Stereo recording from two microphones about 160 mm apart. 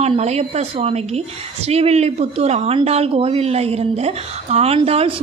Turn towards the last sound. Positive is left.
turn(degrees=-40)  # may be behind; listen again after turning